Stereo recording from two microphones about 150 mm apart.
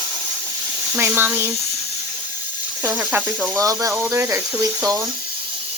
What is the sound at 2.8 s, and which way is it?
Speech, 10° right (ahead or behind).